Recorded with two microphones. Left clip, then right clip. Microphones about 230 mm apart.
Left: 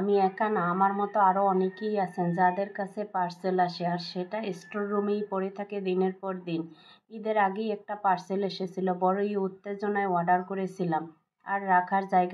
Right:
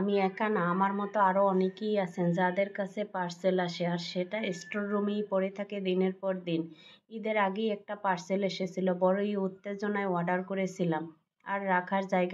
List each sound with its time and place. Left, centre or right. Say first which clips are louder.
0.0 s speech: left 4 dB; right